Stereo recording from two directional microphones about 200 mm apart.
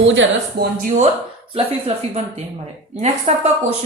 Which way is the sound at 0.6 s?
50° right (ahead or behind).